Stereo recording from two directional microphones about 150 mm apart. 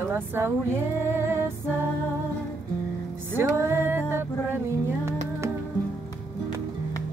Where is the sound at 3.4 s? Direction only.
20° right (ahead or behind).